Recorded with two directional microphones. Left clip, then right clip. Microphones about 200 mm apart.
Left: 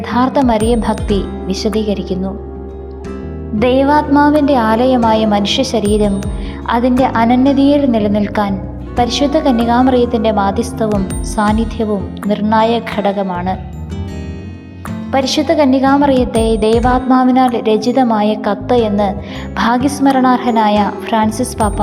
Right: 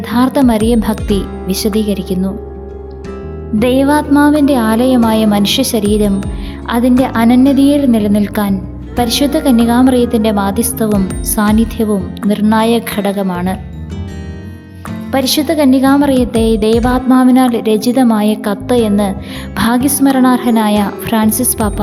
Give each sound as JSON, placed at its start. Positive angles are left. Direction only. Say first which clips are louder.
{"t": 0.0, "sound": "a woman's voice", "louder": "right 1 dB", "side_deg": -35}
{"t": 3.6, "sound": "speech", "louder": "even", "side_deg": -35}
{"t": 10.8, "sound": "speech", "louder": "right 1 dB", "side_deg": 0}
{"t": 11.3, "sound": "speech", "louder": "right 1 dB", "side_deg": -35}
{"t": 15.1, "sound": "speech", "louder": "even", "side_deg": -35}